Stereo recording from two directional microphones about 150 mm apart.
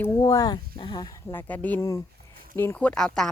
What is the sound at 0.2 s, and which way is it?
Speech, 25° left (ahead or behind).